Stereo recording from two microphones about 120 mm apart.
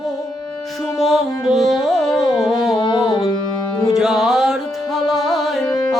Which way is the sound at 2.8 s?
45° left (ahead or behind).